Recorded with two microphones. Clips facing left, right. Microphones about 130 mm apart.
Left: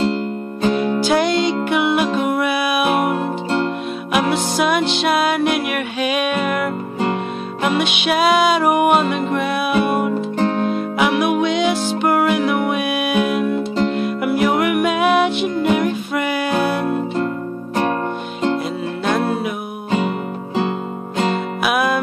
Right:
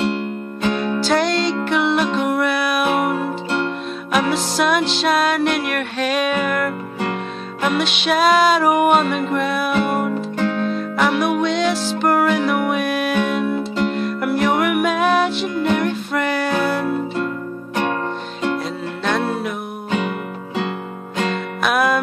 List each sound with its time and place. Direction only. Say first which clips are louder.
0.6 s music: left 3 dB; 35° left (ahead or behind)
1.0 s music: even; 5° left (ahead or behind)
4.1 s music: left 1 dB; 5° left (ahead or behind)
10.3 s music: left 2 dB; 35° left (ahead or behind)
10.7 s music: left 1 dB; 5° left (ahead or behind)
19.0 s music: left 2 dB; 5° left (ahead or behind)
21.6 s music: right 1 dB; centre (ahead or behind)